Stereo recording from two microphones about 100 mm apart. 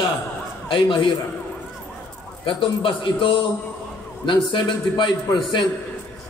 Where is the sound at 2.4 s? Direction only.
60° left (ahead or behind).